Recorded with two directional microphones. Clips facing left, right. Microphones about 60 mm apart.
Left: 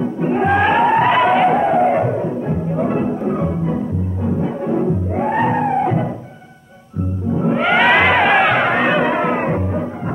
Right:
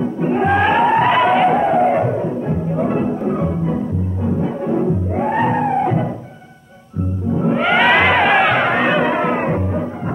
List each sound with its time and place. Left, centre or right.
0.0 s music: left
3.3 s organ: left
4.4 s music: left
7.3 s a sound: left